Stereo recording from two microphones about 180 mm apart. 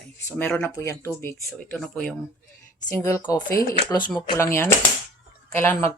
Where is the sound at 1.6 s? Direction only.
5° left (ahead or behind).